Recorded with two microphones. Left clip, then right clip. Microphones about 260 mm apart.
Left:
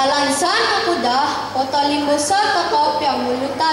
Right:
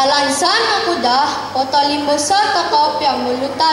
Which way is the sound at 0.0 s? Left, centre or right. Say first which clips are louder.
Right 3 dB; centre.